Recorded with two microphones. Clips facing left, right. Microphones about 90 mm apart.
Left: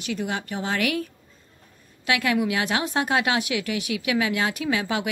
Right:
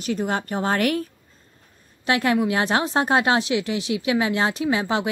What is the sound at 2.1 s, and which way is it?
A woman's voice, 35° right (ahead or behind).